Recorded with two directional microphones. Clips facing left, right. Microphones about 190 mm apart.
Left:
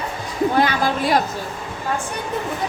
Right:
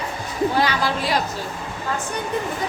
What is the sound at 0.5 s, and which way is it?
Speech, 50° left (ahead or behind).